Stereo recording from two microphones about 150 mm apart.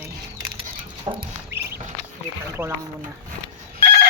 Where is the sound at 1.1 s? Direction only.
30° right (ahead or behind).